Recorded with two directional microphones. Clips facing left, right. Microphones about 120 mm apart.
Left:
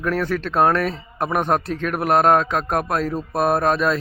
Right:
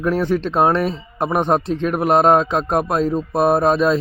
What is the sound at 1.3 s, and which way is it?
Speech, centre (ahead or behind).